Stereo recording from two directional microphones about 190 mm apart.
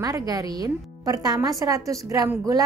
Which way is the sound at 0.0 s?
20° right (ahead or behind).